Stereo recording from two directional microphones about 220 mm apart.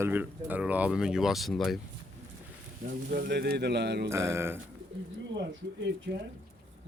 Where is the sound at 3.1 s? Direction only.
50° right (ahead or behind).